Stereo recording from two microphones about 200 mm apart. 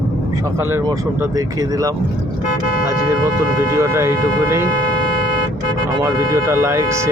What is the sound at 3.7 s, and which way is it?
Speech, 15° right (ahead or behind).